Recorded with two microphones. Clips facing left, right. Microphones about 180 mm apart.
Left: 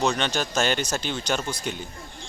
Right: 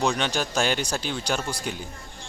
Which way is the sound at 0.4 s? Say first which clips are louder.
Even; 10° right (ahead or behind).